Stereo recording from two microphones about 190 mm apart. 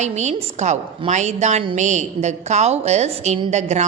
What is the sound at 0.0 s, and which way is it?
A woman's voice, 35° right (ahead or behind).